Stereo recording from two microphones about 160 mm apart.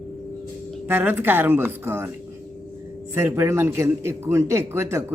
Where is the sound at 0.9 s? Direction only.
10° right (ahead or behind).